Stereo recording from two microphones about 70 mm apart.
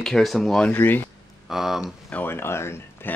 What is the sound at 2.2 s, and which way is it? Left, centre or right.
Speech, left.